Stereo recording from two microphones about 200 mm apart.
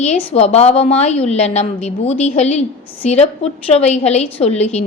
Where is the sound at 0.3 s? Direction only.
30° left (ahead or behind).